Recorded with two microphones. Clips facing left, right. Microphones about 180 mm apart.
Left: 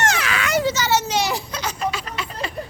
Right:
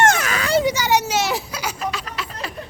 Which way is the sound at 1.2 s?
Centre (ahead or behind).